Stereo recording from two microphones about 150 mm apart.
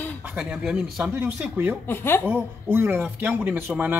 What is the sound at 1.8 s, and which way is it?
Speech, 15° left (ahead or behind).